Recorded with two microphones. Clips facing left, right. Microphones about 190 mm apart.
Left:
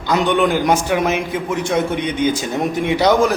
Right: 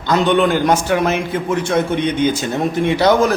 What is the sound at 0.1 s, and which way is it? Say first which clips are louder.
A man's voice: right 2 dB; 10° left (ahead or behind).